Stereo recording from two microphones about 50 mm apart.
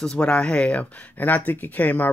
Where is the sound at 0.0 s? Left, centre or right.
Centre.